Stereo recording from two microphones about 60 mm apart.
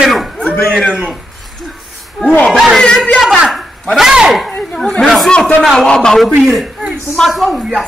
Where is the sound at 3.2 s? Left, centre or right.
Centre.